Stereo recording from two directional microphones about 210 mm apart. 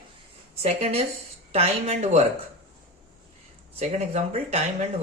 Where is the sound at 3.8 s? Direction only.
30° right (ahead or behind).